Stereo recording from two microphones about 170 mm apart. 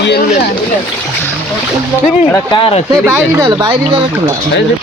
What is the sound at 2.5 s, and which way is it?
Speech, 30° left (ahead or behind).